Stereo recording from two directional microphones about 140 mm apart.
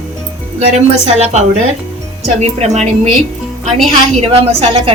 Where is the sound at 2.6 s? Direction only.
55° right (ahead or behind).